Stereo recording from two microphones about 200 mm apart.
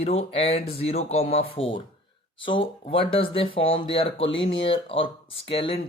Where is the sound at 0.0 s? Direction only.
30° left (ahead or behind).